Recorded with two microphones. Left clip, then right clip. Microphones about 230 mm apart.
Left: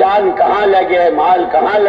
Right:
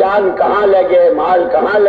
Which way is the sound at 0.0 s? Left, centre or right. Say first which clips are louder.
Left 1 dB; left.